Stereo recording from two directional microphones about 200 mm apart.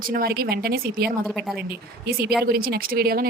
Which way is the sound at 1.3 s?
Centre (ahead or behind).